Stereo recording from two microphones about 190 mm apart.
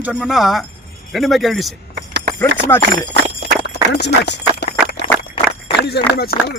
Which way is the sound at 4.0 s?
60° left (ahead or behind).